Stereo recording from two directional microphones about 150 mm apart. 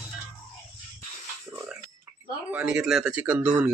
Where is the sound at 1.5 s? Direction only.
10° right (ahead or behind).